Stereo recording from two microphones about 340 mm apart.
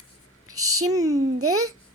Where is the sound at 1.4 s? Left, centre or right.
Right.